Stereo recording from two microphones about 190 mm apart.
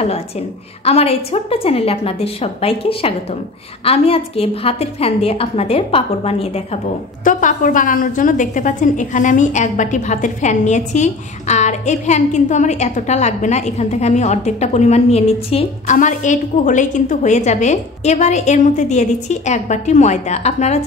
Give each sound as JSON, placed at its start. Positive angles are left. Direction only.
{"t": 0.8, "sound": "a woman's voice", "side_deg": 30}
{"t": 7.2, "sound": "a woman's voice", "side_deg": 45}